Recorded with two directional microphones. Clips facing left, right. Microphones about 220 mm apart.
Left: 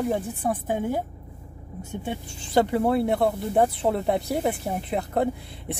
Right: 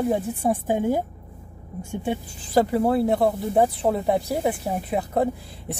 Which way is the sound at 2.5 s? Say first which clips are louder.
Right 1 dB; centre (ahead or behind).